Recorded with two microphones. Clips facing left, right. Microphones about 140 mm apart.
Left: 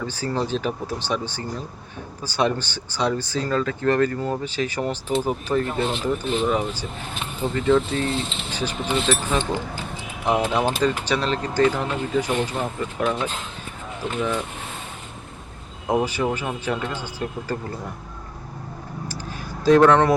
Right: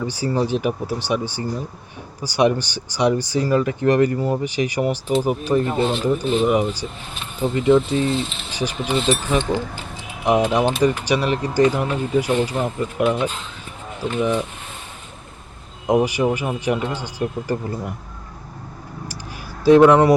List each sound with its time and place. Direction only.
0.0 s speech: 15° right (ahead or behind)
15.9 s speech: 15° right (ahead or behind)
19.6 s speech: 10° right (ahead or behind)